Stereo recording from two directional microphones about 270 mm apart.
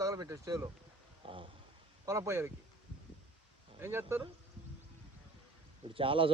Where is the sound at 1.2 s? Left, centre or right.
Centre.